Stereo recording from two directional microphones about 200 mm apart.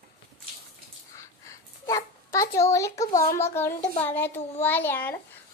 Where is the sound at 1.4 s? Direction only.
15° left (ahead or behind).